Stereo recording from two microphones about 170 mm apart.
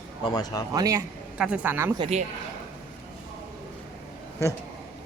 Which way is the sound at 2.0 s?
40° right (ahead or behind).